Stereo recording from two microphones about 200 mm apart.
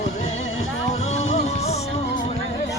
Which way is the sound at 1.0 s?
30° left (ahead or behind).